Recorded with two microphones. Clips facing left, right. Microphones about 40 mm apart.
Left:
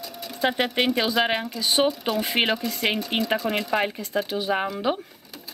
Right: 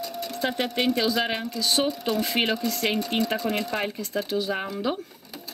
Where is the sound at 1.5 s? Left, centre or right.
Centre.